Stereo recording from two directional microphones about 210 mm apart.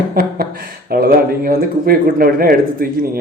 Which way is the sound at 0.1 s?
45° right (ahead or behind).